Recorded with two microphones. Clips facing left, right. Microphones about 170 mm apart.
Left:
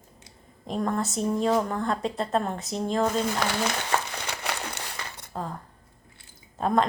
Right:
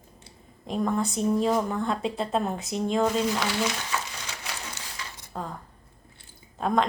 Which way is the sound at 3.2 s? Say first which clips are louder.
Even; 55° left (ahead or behind).